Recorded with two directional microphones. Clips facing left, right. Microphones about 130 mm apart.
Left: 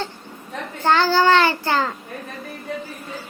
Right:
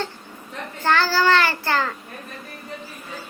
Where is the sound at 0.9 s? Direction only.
20° left (ahead or behind).